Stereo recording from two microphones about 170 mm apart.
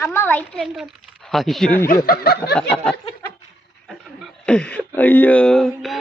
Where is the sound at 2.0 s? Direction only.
65° left (ahead or behind).